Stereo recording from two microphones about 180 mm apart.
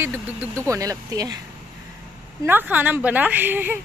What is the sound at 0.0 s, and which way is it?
Speech, 10° right (ahead or behind).